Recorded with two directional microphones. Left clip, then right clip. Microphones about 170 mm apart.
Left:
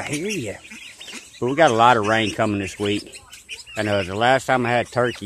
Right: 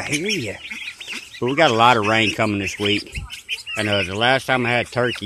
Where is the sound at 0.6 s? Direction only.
15° right (ahead or behind).